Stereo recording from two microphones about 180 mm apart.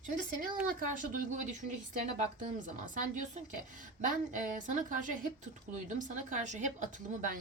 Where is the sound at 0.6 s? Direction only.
50° right (ahead or behind).